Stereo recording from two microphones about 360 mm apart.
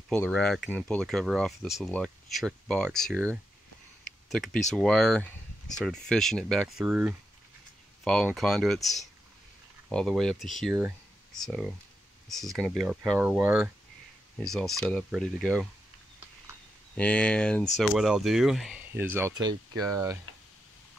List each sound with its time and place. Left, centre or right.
0.1 s speech: centre
16.9 s speech: centre